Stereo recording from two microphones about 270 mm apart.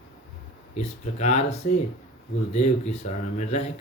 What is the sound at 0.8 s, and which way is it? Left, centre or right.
Speech, left.